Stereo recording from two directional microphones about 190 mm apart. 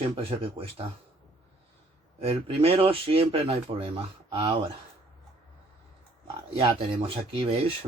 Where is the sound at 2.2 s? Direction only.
30° right (ahead or behind).